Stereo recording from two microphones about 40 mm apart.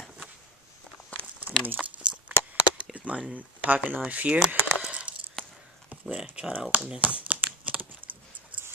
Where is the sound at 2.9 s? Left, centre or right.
Right.